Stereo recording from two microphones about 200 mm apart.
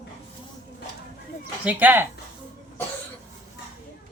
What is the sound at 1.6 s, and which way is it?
Speech, 10° right (ahead or behind).